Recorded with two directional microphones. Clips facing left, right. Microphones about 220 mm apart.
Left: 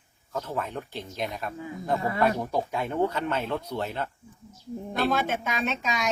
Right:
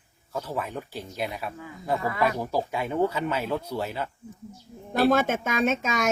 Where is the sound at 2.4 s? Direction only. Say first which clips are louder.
Right 1 dB; 5° right (ahead or behind).